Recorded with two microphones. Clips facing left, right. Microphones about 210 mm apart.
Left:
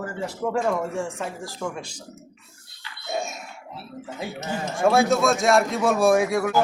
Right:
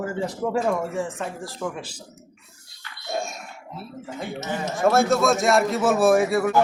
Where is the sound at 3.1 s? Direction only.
Centre (ahead or behind).